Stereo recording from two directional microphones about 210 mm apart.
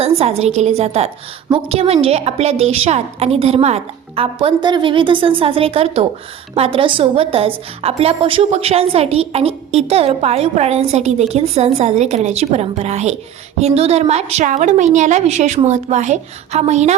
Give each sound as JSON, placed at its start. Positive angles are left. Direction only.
{"t": 0.0, "sound": "a woman's voice", "side_deg": -30}